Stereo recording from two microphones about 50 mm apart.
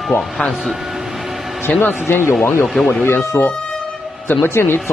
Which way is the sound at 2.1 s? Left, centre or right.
Left.